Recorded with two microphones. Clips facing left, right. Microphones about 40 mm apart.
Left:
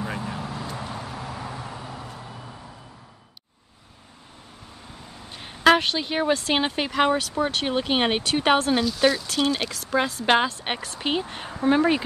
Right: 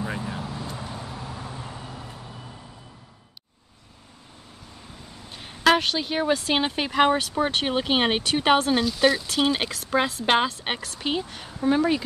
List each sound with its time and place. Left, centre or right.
0.4 s vehicle: left
1.7 s vehicle: left
5.3 s speech: centre
6.9 s speech: centre
7.3 s speech: right
8.0 s speech: centre
9.3 s speech: centre
10.2 s speech: centre
10.8 s speech: centre
11.2 s speech: left